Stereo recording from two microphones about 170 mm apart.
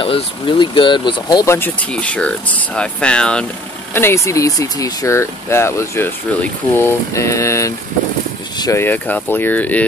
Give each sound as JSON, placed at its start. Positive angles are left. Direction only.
{"t": 0.0, "sound": "speech", "side_deg": 30}